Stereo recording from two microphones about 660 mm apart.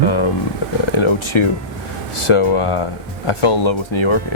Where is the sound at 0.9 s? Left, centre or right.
Left.